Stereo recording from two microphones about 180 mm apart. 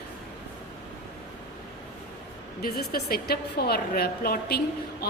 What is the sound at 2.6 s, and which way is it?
A woman's voice, 60° left (ahead or behind).